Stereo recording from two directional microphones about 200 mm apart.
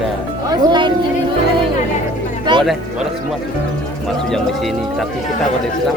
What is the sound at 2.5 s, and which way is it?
Speech, 20° right (ahead or behind).